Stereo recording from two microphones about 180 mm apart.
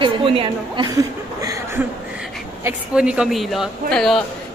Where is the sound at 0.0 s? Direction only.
30° right (ahead or behind).